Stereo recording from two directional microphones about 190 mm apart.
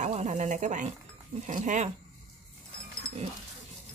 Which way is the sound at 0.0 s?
35° right (ahead or behind).